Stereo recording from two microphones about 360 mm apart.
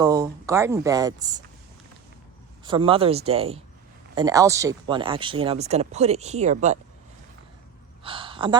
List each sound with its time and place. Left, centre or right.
0.0 s speech: centre
2.6 s speech: centre
8.0 s gasp: centre